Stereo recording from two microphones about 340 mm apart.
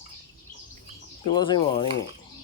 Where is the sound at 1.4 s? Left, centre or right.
Centre.